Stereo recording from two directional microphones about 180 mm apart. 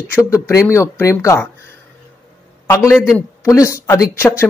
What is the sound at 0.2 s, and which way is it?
Speech, 15° left (ahead or behind).